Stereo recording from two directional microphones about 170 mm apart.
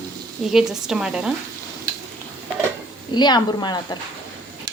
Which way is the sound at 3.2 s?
25° left (ahead or behind).